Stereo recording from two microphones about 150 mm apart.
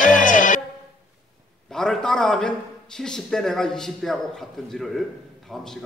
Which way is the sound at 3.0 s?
5° left (ahead or behind).